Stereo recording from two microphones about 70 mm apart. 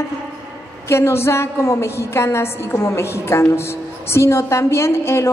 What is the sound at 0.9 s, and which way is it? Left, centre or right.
A woman's voice, left.